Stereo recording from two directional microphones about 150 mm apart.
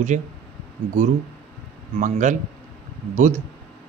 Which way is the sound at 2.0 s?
55° right (ahead or behind).